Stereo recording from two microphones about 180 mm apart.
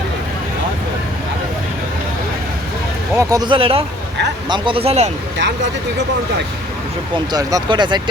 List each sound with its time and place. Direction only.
3.2 s speech: 20° right (ahead or behind); by 5.1 s 35° right (ahead or behind)
5.4 s speech: 75° right (ahead or behind)
7.3 s speech: 25° right (ahead or behind)